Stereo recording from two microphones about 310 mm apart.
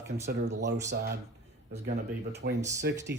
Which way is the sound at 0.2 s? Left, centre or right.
Right.